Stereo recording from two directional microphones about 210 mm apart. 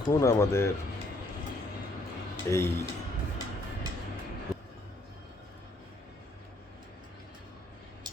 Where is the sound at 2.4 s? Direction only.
15° left (ahead or behind).